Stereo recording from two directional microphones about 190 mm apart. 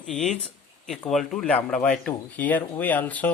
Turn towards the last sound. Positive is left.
turn(degrees=10)  # may be behind; listen again after turning